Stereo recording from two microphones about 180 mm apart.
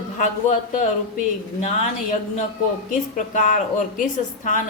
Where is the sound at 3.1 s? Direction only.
45° left (ahead or behind).